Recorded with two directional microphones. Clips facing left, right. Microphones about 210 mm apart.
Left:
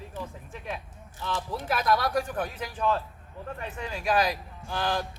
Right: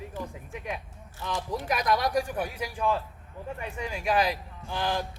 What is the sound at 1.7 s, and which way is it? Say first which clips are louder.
Speech: left 1 dB; 15° right (ahead or behind).